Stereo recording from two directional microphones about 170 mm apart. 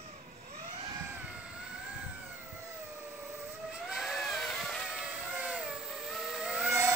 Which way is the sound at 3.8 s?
Centre (ahead or behind).